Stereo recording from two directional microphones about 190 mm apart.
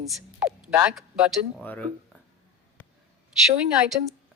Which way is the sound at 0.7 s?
10° right (ahead or behind).